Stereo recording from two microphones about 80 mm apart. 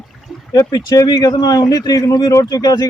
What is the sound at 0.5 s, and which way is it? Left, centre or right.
A man's voice, left.